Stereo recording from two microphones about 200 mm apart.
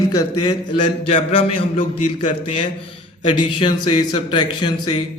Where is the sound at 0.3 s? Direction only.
25° left (ahead or behind).